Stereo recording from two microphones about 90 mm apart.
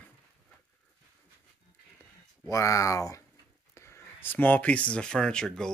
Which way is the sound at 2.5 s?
35° left (ahead or behind).